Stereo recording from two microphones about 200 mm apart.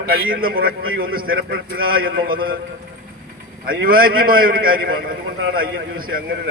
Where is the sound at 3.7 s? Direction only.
45° right (ahead or behind).